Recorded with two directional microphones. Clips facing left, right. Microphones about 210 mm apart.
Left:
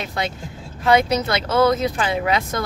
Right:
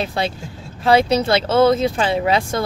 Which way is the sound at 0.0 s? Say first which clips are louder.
Right 4 dB; 30° right (ahead or behind).